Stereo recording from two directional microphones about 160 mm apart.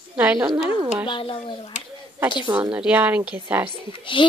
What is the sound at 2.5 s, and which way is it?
A woman's voice, 10° right (ahead or behind).